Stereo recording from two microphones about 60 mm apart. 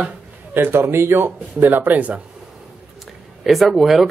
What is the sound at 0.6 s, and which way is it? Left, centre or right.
A man's voice, right.